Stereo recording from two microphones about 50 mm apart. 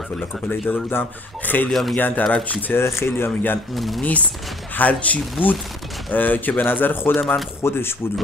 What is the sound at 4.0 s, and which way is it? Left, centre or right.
Speech, left.